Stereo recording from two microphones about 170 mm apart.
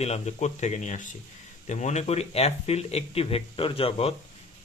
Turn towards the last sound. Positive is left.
turn(degrees=35)  # may be behind; listen again after turning